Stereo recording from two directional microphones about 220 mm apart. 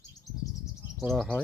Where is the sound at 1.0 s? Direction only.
Centre (ahead or behind).